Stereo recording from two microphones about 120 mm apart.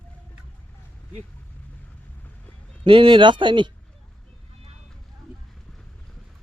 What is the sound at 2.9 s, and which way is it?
Speech, 45° right (ahead or behind).